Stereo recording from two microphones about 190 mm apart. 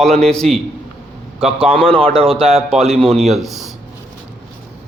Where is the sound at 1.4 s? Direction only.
30° right (ahead or behind).